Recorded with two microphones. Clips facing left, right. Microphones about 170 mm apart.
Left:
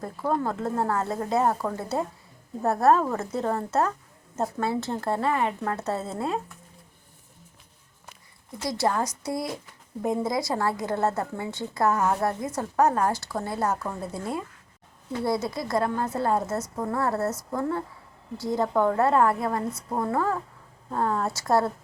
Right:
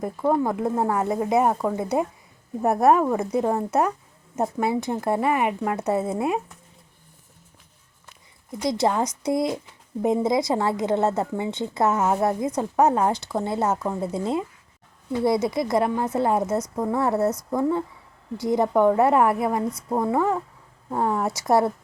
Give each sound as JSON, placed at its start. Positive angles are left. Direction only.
{"t": 0.0, "sound": "speech", "side_deg": -15}
{"t": 8.5, "sound": "a woman's voice", "side_deg": -20}